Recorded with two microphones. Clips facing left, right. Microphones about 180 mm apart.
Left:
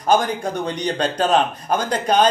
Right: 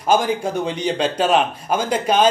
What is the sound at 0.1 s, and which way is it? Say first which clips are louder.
A man's voice: right 1 dB; 5° right (ahead or behind).